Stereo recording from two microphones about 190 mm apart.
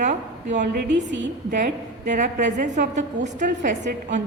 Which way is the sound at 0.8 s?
70° right (ahead or behind).